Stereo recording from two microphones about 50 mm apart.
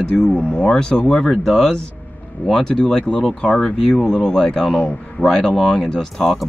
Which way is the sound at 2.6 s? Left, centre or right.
Centre.